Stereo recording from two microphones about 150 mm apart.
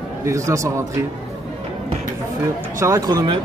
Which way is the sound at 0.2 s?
20° right (ahead or behind).